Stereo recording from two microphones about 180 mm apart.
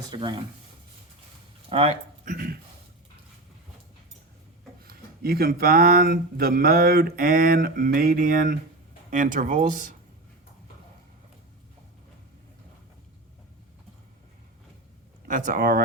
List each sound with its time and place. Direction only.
0.1 s speech: 25° right (ahead or behind)
1.7 s speech: 35° right (ahead or behind)
2.2 s speech: 50° right (ahead or behind)
4.8 s speech: 55° right (ahead or behind)
15.3 s speech: 50° right (ahead or behind)